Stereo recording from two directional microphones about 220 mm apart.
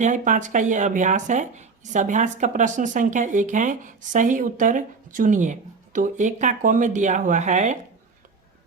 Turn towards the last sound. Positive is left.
turn(degrees=-35)  # may be behind; listen again after turning